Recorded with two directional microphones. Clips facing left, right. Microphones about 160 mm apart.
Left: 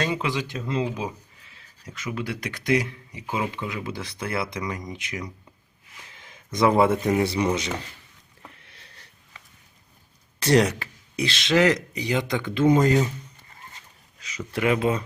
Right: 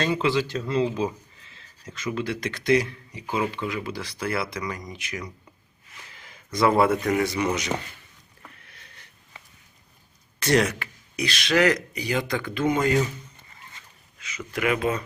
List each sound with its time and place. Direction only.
0.0 s speech: 15° left (ahead or behind)
8.4 s rowboat: 25° left (ahead or behind)
10.4 s speech: 30° left (ahead or behind)
12.7 s speech: 35° left (ahead or behind)
13.7 s a sound: 35° left (ahead or behind)